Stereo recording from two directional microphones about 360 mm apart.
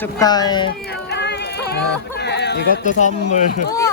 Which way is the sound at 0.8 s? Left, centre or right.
Left.